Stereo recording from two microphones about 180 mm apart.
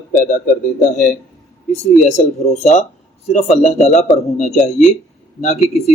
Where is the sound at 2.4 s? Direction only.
35° left (ahead or behind).